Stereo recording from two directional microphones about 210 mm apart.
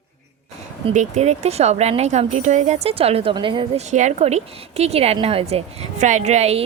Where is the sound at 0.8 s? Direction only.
35° right (ahead or behind).